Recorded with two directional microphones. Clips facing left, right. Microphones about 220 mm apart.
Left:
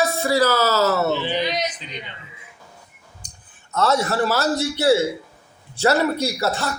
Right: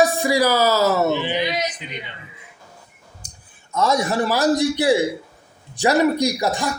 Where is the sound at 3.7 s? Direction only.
15° right (ahead or behind).